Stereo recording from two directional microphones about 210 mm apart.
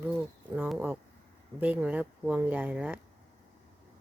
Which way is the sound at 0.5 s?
10° right (ahead or behind).